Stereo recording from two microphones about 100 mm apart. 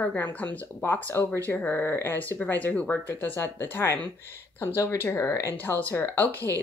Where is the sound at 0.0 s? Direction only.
15° left (ahead or behind).